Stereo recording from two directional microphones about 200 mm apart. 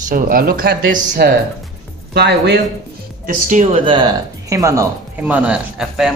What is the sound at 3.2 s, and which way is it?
Speech, 35° right (ahead or behind).